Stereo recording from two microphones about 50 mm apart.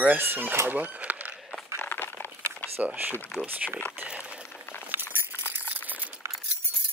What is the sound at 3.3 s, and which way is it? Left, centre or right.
Speech, left.